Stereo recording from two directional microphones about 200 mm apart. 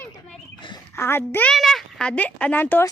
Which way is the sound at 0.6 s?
20° left (ahead or behind).